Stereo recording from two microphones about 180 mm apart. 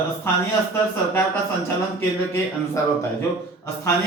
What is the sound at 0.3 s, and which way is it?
Speech, 10° left (ahead or behind).